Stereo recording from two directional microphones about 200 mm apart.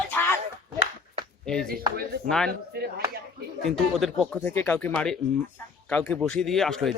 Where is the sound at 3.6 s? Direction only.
Centre (ahead or behind).